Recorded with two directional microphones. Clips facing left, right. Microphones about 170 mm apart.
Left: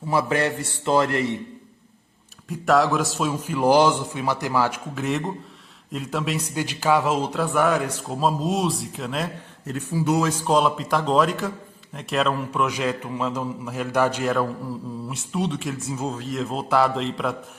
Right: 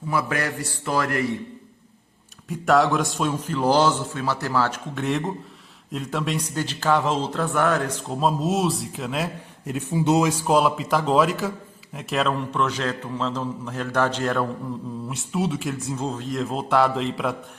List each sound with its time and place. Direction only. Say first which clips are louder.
0.1 s a man's voice: left 3 dB; 25° left (ahead or behind)
2.5 s a man's voice: even; centre (ahead or behind)
6.5 s speech: left 2 dB; 10° left (ahead or behind)
9.6 s speech: right 2 dB; 20° right (ahead or behind)
10.2 s a man's voice: right 1 dB; 5° right (ahead or behind)